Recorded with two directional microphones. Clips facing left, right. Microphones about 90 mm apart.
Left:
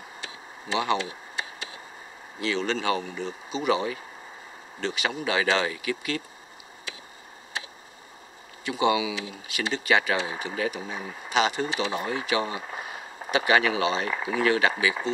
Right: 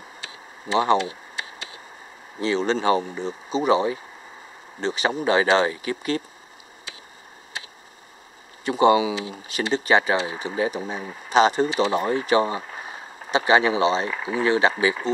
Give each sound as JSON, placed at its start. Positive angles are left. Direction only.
{"t": 0.7, "sound": "speech", "side_deg": -35}
{"t": 2.4, "sound": "speech", "side_deg": -30}
{"t": 8.6, "sound": "speech", "side_deg": -40}
{"t": 11.9, "sound": "a sound", "side_deg": -40}
{"t": 13.5, "sound": "speech", "side_deg": -25}